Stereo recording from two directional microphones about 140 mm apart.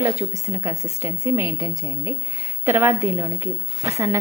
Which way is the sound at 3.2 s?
20° right (ahead or behind).